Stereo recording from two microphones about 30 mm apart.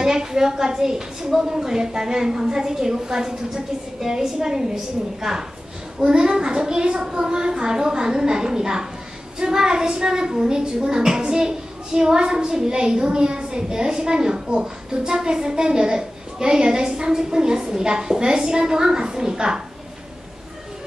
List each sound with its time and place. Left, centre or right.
0.0 s a woman's voice: centre